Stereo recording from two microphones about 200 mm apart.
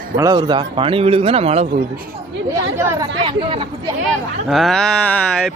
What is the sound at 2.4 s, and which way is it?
Speech, 15° right (ahead or behind).